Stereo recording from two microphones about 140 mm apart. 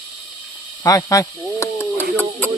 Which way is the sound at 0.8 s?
20° left (ahead or behind).